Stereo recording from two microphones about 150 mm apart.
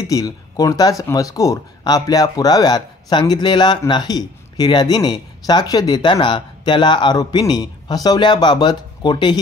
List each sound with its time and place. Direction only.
0.0 s speech: 25° left (ahead or behind)